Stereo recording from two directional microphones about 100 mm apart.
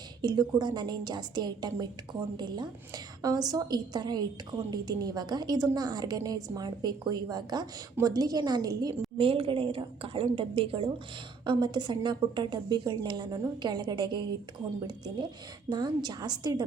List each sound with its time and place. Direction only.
0.2 s a woman's voice: 45° right (ahead or behind)
9.1 s a woman's voice: 65° right (ahead or behind)
11.4 s a woman's voice: 45° right (ahead or behind)